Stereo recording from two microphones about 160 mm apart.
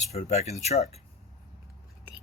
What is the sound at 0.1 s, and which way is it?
Speech, 45° left (ahead or behind).